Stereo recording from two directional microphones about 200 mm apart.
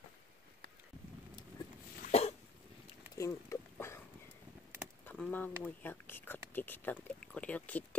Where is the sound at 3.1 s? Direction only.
15° left (ahead or behind).